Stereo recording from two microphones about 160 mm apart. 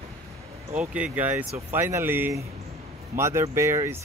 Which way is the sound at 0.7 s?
5° right (ahead or behind).